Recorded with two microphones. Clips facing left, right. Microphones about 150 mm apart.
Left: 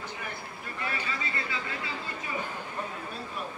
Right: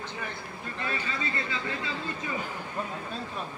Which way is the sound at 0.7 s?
30° right (ahead or behind).